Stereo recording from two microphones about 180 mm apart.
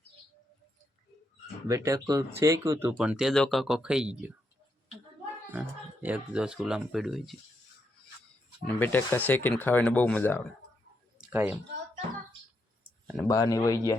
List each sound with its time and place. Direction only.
1.6 s speech: 20° right (ahead or behind)
5.5 s speech: 10° right (ahead or behind)
8.6 s speech: 10° left (ahead or behind)
11.2 s a sound: 10° right (ahead or behind)
13.2 s speech: 20° left (ahead or behind)